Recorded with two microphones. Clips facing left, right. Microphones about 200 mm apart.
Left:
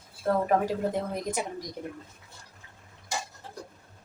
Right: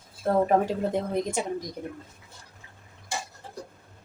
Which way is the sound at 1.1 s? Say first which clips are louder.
Right 4 dB; 25° right (ahead or behind).